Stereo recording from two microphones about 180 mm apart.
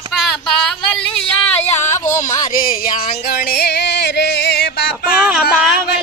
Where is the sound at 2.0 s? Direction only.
45° left (ahead or behind).